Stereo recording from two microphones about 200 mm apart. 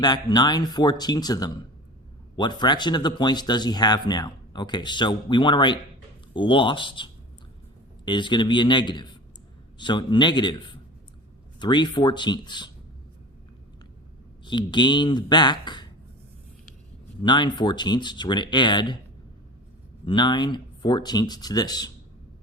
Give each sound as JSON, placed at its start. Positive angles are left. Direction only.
{"t": 0.0, "sound": "speech", "side_deg": 20}
{"t": 11.6, "sound": "speech", "side_deg": 20}
{"t": 14.4, "sound": "speech", "side_deg": 25}
{"t": 17.2, "sound": "speech", "side_deg": 20}
{"t": 20.1, "sound": "speech", "side_deg": 20}